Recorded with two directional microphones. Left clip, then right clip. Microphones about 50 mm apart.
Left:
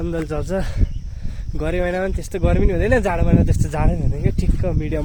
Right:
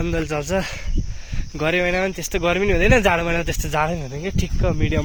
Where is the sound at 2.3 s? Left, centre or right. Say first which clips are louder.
Right 3 dB; left.